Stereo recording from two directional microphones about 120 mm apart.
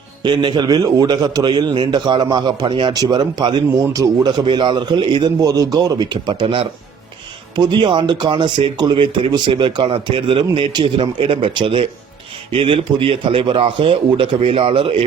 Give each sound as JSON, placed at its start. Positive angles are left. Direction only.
{"t": 0.2, "sound": "a man's voice", "side_deg": -40}
{"t": 6.4, "sound": "speech", "side_deg": -50}